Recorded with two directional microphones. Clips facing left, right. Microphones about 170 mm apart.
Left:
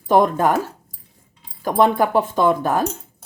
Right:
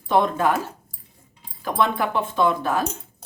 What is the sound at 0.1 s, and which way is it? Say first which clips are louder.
Speech: left 4 dB; 45° left (ahead or behind).